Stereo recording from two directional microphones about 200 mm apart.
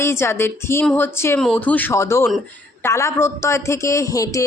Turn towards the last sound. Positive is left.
turn(degrees=15)  # may be behind; listen again after turning